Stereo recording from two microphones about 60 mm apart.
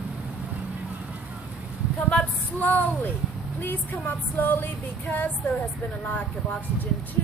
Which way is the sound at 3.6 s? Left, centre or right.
Left.